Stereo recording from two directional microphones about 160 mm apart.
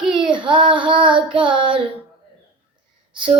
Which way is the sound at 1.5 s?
35° right (ahead or behind).